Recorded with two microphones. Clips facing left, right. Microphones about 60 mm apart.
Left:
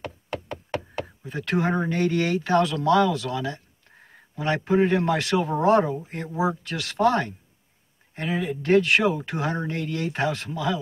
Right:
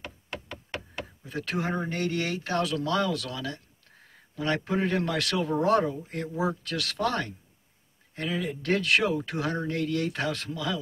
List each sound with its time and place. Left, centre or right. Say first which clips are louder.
1.2 s speech: left 6 dB; left
2.7 s speech: left 7 dB; left
3.0 s speech: left 6 dB; left
10.5 s speech: left 5 dB; left